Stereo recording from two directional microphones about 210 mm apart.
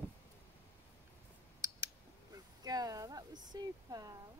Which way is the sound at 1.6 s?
15° right (ahead or behind).